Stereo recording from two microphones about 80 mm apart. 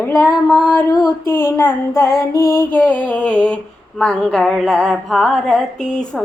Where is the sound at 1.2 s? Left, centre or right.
Left.